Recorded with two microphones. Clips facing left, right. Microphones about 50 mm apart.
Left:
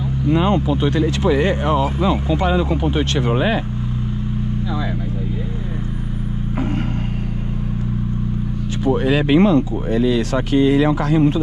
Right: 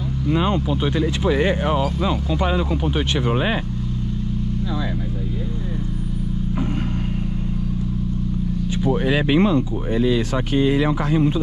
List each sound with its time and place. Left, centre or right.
9.0 s speech: left